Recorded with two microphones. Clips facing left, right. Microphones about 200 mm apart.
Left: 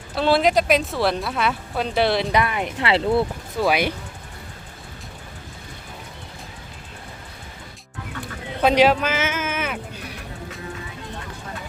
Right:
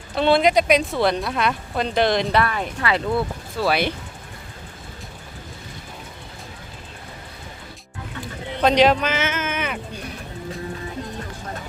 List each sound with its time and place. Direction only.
0.2 s speech: 5° left (ahead or behind)
2.8 s speech: 25° left (ahead or behind)
8.6 s speech: 10° left (ahead or behind)